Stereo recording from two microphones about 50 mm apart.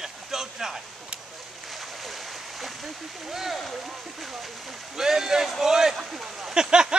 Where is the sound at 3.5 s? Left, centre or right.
Centre.